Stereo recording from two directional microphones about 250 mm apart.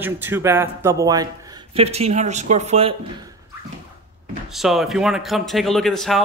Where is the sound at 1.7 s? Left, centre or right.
Right.